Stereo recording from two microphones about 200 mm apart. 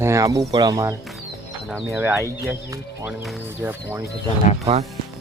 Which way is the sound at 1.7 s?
Centre (ahead or behind).